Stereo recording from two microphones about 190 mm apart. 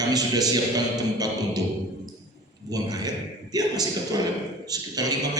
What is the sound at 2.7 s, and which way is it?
A man's voice, 20° right (ahead or behind).